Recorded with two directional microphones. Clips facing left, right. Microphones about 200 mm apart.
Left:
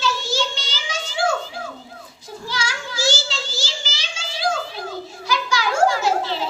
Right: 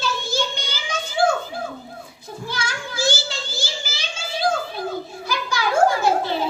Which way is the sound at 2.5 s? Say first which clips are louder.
Left 1 dB; 55° right (ahead or behind).